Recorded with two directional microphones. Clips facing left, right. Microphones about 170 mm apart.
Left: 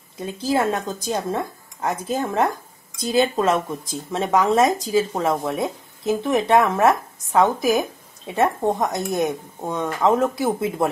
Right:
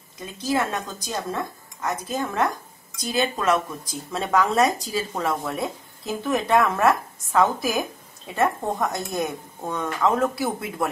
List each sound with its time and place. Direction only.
0.6 s speech: 30° left (ahead or behind)